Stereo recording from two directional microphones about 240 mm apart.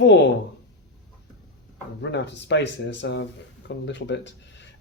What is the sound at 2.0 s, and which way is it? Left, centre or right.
Speech, left.